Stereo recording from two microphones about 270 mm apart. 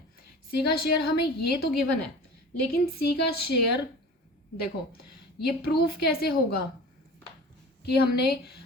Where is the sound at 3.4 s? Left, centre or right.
Left.